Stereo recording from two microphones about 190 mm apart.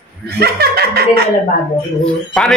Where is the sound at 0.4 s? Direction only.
55° right (ahead or behind).